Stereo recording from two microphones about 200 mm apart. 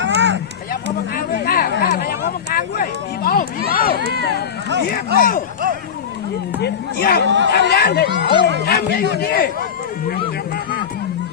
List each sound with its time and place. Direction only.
0.0 s run: 60° right (ahead or behind)
1.1 s a sound: 50° left (ahead or behind)
4.9 s a man's voice: 45° left (ahead or behind)
6.6 s a man's voice: 50° left (ahead or behind)
7.3 s speech: 65° right (ahead or behind)
7.5 s a man's voice: 55° left (ahead or behind)